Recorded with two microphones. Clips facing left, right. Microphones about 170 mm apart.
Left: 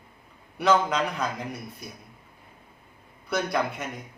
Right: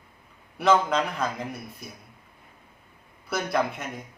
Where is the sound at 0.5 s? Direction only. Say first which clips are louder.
Right 1 dB; centre (ahead or behind).